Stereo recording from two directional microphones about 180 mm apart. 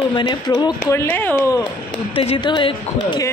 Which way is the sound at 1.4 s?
25° left (ahead or behind).